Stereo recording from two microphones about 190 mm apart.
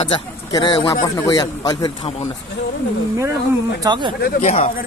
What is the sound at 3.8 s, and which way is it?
Speech, 25° right (ahead or behind).